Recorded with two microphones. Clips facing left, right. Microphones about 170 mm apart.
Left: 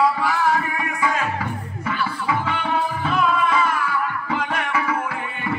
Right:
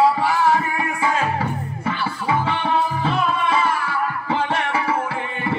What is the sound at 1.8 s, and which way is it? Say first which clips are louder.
Music: even; 30° right (ahead or behind).